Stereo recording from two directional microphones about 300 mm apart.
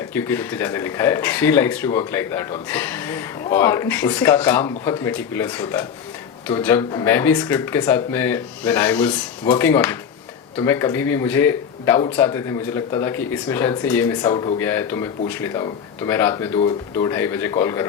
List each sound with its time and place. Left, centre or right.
0.1 s speech: centre